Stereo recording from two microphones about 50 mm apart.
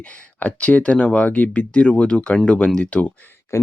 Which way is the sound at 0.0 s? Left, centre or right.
Left.